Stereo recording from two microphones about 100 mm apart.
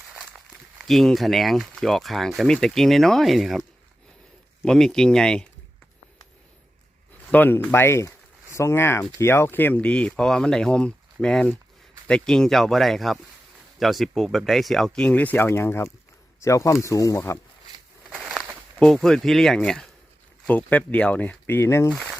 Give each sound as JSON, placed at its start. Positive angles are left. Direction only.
{"t": 0.9, "sound": "speech", "side_deg": 0}
{"t": 7.3, "sound": "speech", "side_deg": 20}
{"t": 17.7, "sound": "a sound", "side_deg": -40}
{"t": 18.8, "sound": "speech", "side_deg": 5}